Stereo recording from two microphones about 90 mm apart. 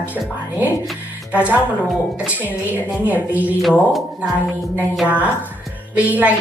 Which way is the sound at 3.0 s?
20° right (ahead or behind).